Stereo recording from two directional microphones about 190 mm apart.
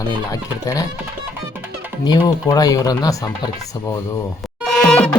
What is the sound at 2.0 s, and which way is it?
Speech, 20° left (ahead or behind).